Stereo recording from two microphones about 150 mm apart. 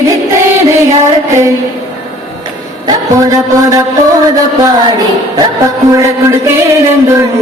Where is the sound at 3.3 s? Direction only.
20° right (ahead or behind).